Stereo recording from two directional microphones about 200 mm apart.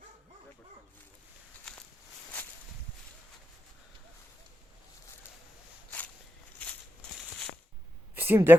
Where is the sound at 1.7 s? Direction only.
5° left (ahead or behind).